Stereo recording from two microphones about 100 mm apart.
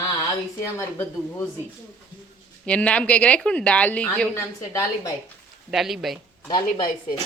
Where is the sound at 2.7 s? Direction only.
10° left (ahead or behind).